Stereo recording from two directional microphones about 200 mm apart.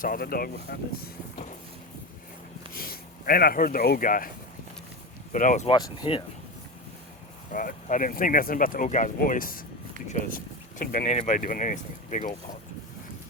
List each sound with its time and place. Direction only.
0.0 s speech: 45° left (ahead or behind)
2.7 s speech: 50° left (ahead or behind)
5.3 s speech: 40° left (ahead or behind)
5.6 s speech: 20° left (ahead or behind)
7.5 s speech: 40° left (ahead or behind)